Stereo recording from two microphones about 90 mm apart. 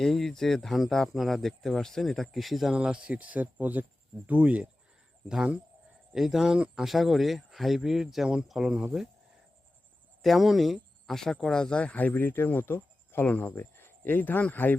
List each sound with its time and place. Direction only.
0.0 s speech: 5° left (ahead or behind)
2.7 s speech: 10° right (ahead or behind)
10.2 s speech: centre (ahead or behind); by 14.8 s 20° left (ahead or behind)